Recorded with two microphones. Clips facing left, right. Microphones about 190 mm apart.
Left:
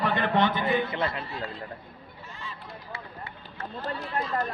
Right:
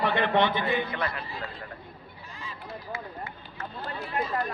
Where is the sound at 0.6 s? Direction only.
25° left (ahead or behind).